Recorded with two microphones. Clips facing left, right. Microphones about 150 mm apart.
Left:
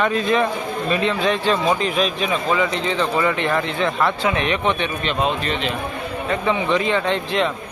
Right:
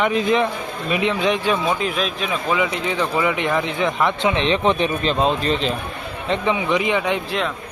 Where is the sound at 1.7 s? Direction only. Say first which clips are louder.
Left 2 dB; centre (ahead or behind); by 5.7 s 35° right (ahead or behind).